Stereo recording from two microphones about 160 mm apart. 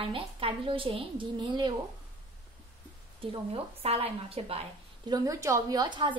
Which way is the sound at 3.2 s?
35° right (ahead or behind).